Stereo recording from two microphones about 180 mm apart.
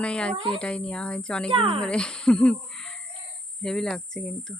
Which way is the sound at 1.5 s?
30° right (ahead or behind).